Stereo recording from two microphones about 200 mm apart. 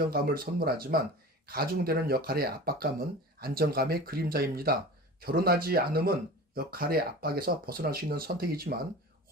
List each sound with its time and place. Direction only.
0.1 s speech: 50° right (ahead or behind)